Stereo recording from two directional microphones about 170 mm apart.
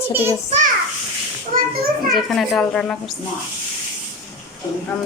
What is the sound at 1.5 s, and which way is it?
Speech, 55° right (ahead or behind).